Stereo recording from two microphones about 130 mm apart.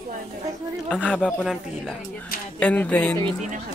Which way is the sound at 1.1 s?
10° left (ahead or behind).